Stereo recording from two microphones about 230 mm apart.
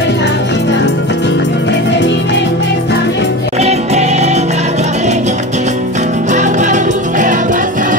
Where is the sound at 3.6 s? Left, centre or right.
Right.